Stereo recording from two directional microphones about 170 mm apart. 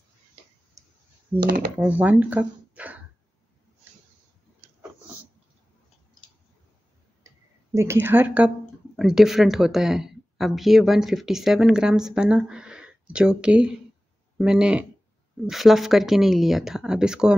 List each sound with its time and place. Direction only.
0.8 s clicking: 20° right (ahead or behind)
1.4 s speech: 60° right (ahead or behind)
1.8 s speech: 10° right (ahead or behind)
7.7 s speech: 15° right (ahead or behind)